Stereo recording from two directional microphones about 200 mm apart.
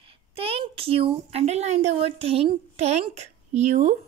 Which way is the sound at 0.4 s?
30° right (ahead or behind).